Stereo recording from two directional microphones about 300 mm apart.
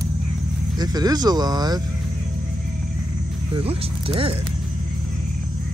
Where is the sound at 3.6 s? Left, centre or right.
Centre.